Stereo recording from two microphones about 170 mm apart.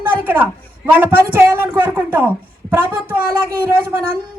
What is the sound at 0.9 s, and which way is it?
A woman's voice, 10° right (ahead or behind).